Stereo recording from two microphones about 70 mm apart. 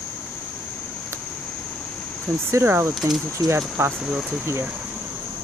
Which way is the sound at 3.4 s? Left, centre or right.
Right.